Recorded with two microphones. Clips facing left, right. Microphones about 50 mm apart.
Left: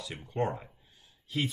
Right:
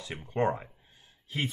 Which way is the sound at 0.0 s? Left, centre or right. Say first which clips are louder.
Right 3 dB; right.